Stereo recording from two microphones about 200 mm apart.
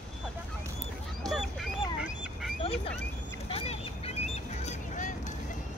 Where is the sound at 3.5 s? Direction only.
30° left (ahead or behind).